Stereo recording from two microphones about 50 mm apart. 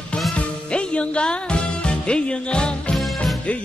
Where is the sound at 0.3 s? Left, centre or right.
Left.